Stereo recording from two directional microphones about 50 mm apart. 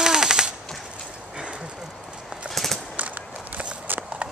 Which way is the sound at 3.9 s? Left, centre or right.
Right.